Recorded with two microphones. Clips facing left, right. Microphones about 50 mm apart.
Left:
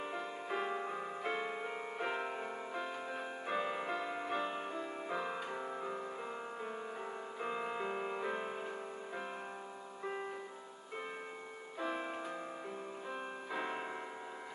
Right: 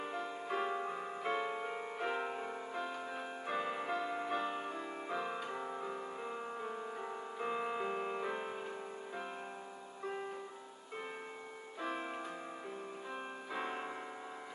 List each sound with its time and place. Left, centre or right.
0.0 s music: centre
11.8 s music: centre
13.1 s music: centre